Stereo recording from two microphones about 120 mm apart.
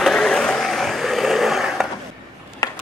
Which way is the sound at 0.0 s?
5° left (ahead or behind).